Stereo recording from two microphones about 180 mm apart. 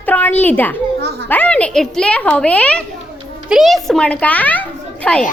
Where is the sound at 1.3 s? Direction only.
10° left (ahead or behind).